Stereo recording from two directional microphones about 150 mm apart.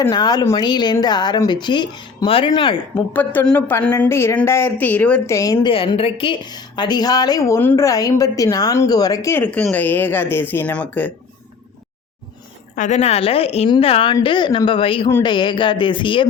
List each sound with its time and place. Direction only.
0.1 s a woman's voice: 25° left (ahead or behind)
2.9 s a woman's voice: 10° left (ahead or behind)
5.3 s a woman's voice: 20° left (ahead or behind)
5.6 s a woman's voice: 35° left (ahead or behind)
9.4 s a woman's voice: 10° left (ahead or behind)
12.7 s a woman's voice: 55° left (ahead or behind); by 16.2 s 35° left (ahead or behind)